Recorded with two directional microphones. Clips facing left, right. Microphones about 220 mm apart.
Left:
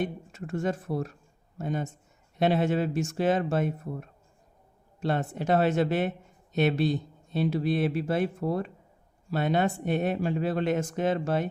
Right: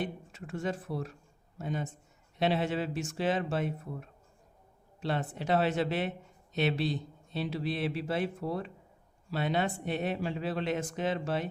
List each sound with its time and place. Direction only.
0.0 s speech: 45° left (ahead or behind)